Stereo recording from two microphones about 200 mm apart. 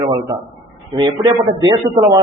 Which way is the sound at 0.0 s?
20° right (ahead or behind).